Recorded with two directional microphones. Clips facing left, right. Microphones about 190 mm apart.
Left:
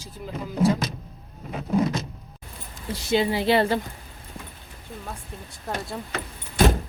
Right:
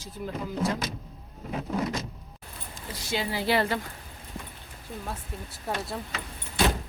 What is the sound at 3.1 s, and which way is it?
Speech, 25° left (ahead or behind).